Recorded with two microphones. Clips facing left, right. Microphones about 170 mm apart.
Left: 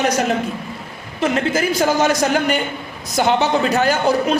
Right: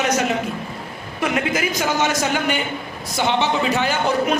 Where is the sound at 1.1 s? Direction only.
30° left (ahead or behind).